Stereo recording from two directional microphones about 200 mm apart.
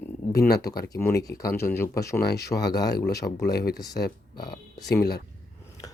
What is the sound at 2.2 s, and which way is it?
Speech, 55° left (ahead or behind).